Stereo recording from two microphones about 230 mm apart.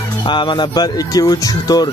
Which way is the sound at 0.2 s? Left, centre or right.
Left.